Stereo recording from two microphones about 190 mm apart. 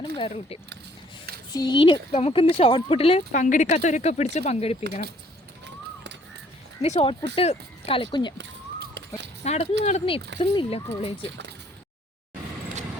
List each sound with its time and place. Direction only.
0.0 s speech: 30° left (ahead or behind)
6.8 s speech: 30° left (ahead or behind)
8.4 s a sound: 65° right (ahead or behind)
9.4 s speech: 35° left (ahead or behind)